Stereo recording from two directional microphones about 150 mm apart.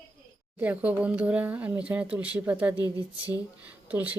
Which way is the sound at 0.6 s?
10° right (ahead or behind).